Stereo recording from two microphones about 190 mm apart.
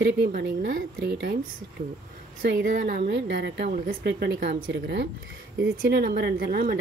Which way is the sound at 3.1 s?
65° right (ahead or behind).